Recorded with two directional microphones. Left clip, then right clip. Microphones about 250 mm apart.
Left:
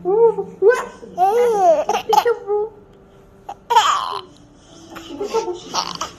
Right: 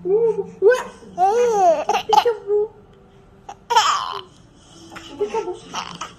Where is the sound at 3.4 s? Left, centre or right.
Centre.